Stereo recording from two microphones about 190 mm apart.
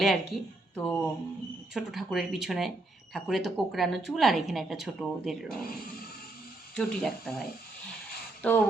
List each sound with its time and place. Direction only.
0.0 s speech: centre (ahead or behind)
6.7 s speech: 5° left (ahead or behind)